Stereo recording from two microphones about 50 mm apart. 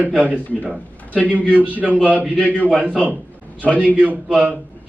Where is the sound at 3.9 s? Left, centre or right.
Right.